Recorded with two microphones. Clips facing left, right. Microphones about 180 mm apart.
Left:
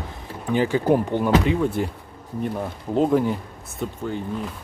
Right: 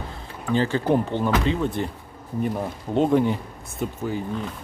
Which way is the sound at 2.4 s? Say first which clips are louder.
Right 1 dB; centre (ahead or behind).